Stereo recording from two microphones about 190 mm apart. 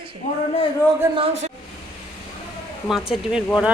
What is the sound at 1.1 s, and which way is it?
Speech, 30° right (ahead or behind).